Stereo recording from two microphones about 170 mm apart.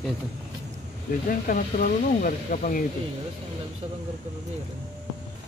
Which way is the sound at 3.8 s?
30° right (ahead or behind).